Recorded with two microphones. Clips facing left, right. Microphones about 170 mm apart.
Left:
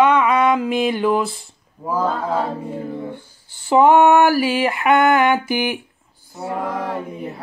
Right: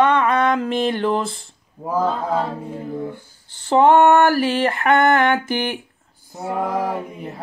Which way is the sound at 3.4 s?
10° left (ahead or behind).